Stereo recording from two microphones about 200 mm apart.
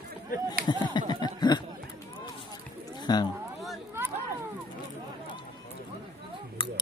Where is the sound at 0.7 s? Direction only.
20° left (ahead or behind).